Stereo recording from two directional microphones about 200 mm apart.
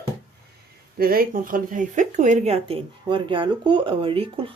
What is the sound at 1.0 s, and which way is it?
Speech, 45° right (ahead or behind).